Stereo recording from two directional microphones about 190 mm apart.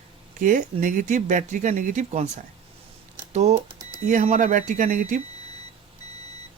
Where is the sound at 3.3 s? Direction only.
35° right (ahead or behind).